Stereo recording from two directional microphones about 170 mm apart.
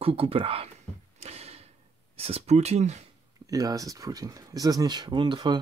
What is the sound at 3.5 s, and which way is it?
Speech, 20° right (ahead or behind).